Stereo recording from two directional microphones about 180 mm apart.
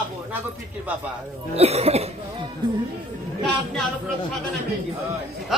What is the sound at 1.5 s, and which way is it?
Speech, 35° right (ahead or behind).